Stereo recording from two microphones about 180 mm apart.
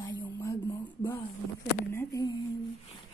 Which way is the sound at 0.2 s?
15° left (ahead or behind).